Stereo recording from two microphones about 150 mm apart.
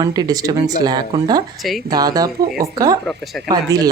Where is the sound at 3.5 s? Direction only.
25° right (ahead or behind).